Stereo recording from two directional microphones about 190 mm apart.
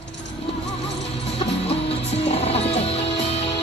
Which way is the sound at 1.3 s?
30° left (ahead or behind).